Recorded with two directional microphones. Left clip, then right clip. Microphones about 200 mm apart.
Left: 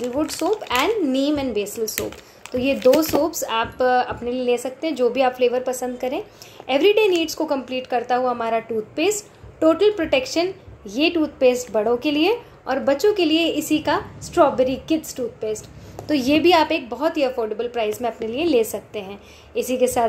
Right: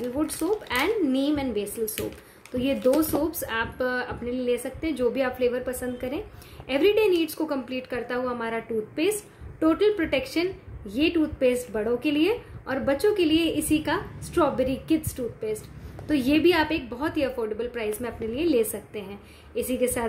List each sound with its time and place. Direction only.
0.7 s a woman's voice: 15° right (ahead or behind)
3.3 s a woman's voice: 15° right (ahead or behind)